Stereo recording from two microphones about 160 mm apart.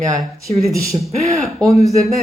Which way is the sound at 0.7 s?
20° right (ahead or behind).